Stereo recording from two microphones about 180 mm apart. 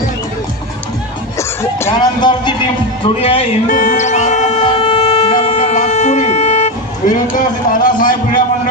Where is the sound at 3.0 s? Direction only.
30° left (ahead or behind).